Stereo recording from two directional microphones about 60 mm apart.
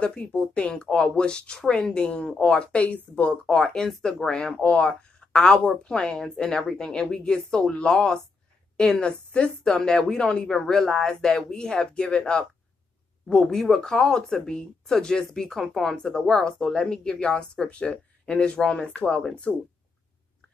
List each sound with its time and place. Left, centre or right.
0.0 s speech: centre
4.6 s speech: left